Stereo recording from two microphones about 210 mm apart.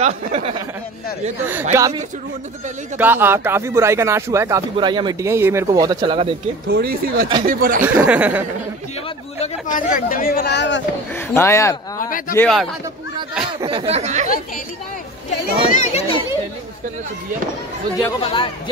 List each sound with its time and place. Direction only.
0.0 s speech: 30° right (ahead or behind)
1.5 s speech: 10° right (ahead or behind)
6.7 s speech: 45° right (ahead or behind)
7.8 s speech: 10° right (ahead or behind)
9.4 s speech: 40° left (ahead or behind); by 10.8 s 55° left (ahead or behind)
11.1 s speech: 15° left (ahead or behind)
12.0 s a child's voice: 40° left (ahead or behind)
12.4 s a man's voice: centre (ahead or behind)
13.6 s speech: 25° right (ahead or behind)
15.7 s a child's voice: 35° left (ahead or behind)
18.2 s a man's voice: 25° left (ahead or behind)